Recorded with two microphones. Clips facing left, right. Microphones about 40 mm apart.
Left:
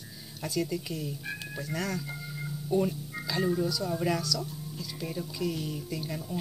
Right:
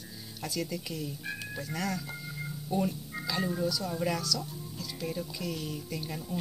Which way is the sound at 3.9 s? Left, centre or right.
Centre.